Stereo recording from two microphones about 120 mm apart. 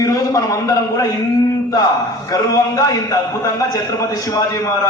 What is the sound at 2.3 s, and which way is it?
A man's voice, 30° left (ahead or behind).